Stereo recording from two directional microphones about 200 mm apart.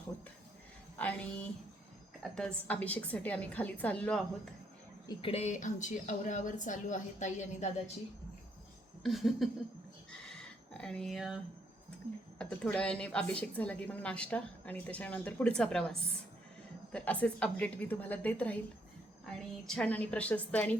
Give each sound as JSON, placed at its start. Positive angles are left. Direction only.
{"t": 0.9, "sound": "a woman's voice", "side_deg": 5}
{"t": 5.0, "sound": "speech", "side_deg": 30}
{"t": 9.0, "sound": "a woman's voice", "side_deg": 0}
{"t": 10.2, "sound": "a sound", "side_deg": 5}
{"t": 12.4, "sound": "a woman's voice", "side_deg": 5}
{"t": 19.6, "sound": "a woman's voice", "side_deg": 5}